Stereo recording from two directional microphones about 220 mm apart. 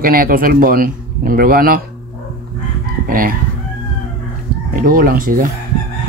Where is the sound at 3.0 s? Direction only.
40° right (ahead or behind).